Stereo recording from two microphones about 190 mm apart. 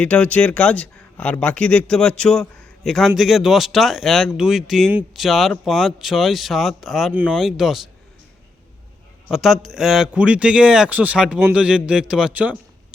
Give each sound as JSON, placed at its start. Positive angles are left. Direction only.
{"t": 0.0, "sound": "speech", "side_deg": 5}
{"t": 9.3, "sound": "speech", "side_deg": 0}